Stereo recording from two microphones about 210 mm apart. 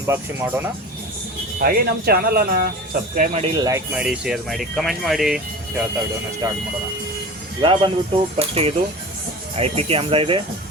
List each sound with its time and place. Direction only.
0.1 s speech: 10° right (ahead or behind)
1.5 s speech: 45° right (ahead or behind)
3.4 s speech: 15° right (ahead or behind)
6.4 s speech: 10° right (ahead or behind)
7.6 s speech: 25° right (ahead or behind)